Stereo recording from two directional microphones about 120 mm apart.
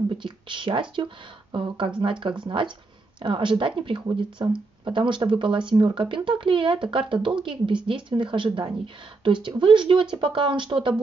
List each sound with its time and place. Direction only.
0.2 s a woman's voice: 45° right (ahead or behind)